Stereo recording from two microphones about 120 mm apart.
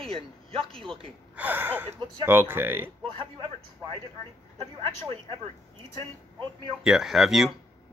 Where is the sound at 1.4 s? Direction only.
15° right (ahead or behind).